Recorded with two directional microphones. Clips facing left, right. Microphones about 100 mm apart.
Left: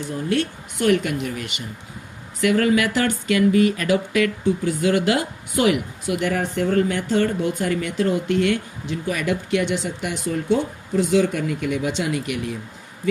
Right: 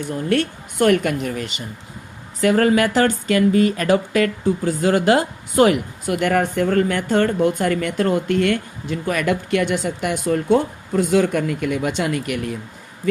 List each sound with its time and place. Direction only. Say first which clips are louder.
0.3 s speech: right 3 dB; 55° right (ahead or behind)